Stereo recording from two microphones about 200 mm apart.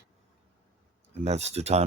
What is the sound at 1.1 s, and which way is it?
Speech, 35° right (ahead or behind).